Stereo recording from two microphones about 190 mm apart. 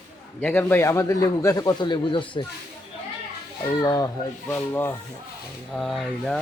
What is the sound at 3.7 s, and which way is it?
A man's voice, 20° left (ahead or behind).